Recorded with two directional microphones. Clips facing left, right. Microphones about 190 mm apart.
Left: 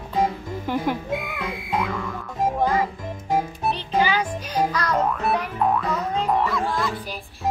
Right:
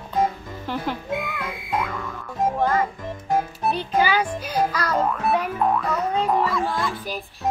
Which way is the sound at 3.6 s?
10° right (ahead or behind).